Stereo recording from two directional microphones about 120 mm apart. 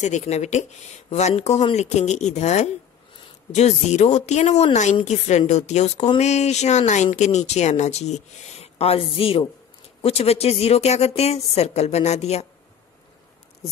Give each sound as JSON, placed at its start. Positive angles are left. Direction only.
{"t": 0.0, "sound": "a woman's voice", "side_deg": 75}